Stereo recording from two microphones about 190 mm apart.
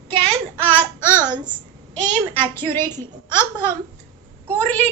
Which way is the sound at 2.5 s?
10° left (ahead or behind).